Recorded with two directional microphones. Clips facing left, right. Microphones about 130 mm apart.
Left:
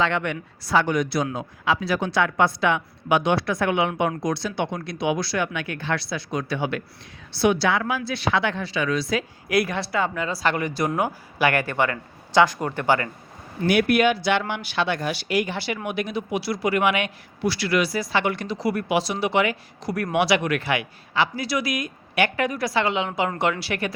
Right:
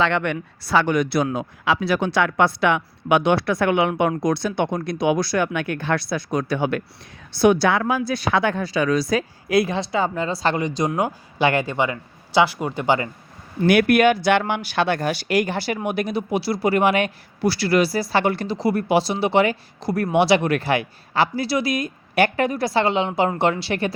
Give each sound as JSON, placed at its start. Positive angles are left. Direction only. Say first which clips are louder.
{"t": 0.0, "sound": "speech", "louder": "right 3 dB", "side_deg": -60}
{"t": 9.5, "sound": "speech", "louder": "right 3 dB", "side_deg": -25}
{"t": 13.7, "sound": "speech", "louder": "right 4 dB", "side_deg": -55}